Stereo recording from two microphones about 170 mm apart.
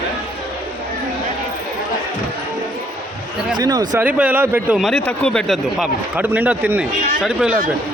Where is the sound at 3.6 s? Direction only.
25° right (ahead or behind).